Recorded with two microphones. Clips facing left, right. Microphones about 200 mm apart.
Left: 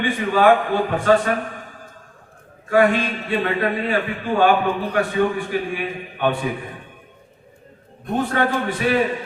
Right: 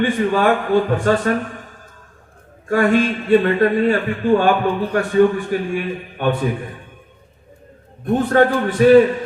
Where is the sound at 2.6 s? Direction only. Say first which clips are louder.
Right 2 dB; 45° right (ahead or behind).